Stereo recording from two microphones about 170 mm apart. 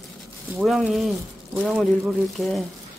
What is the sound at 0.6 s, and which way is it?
Speech, centre (ahead or behind).